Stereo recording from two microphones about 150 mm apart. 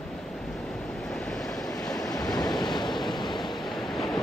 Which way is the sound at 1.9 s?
25° left (ahead or behind).